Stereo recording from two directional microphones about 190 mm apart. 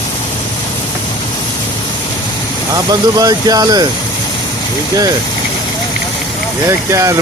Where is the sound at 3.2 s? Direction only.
20° right (ahead or behind).